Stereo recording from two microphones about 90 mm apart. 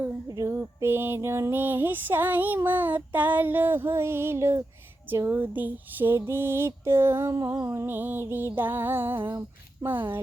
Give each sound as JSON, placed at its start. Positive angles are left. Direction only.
{"t": 0.3, "sound": "female singing", "side_deg": -40}
{"t": 0.5, "sound": "music", "side_deg": -25}
{"t": 5.3, "sound": "music", "side_deg": -20}
{"t": 7.3, "sound": "music", "side_deg": -40}